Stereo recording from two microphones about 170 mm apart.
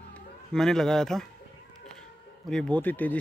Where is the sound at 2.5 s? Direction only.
5° left (ahead or behind).